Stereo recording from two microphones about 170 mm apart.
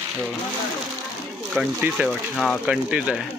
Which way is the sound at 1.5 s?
5° right (ahead or behind).